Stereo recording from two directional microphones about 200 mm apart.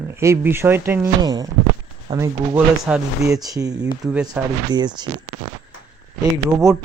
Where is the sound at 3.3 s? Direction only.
15° right (ahead or behind).